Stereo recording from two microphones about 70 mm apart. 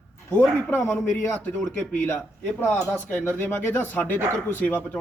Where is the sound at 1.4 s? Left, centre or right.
Left.